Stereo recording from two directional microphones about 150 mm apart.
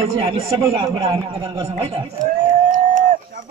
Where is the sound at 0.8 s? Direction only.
25° right (ahead or behind).